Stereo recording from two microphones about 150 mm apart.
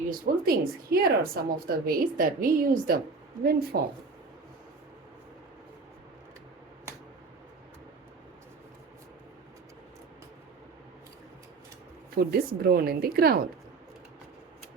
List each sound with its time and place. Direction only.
0.1 s a woman's voice: 85° right
12.1 s speech: 85° right